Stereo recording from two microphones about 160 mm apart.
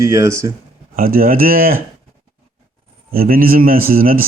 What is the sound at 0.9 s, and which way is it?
Speech, 65° right (ahead or behind).